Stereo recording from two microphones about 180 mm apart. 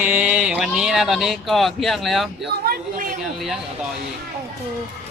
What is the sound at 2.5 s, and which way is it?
Speech, 60° right (ahead or behind).